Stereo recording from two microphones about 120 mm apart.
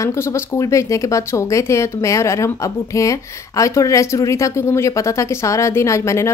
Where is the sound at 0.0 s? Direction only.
25° left (ahead or behind).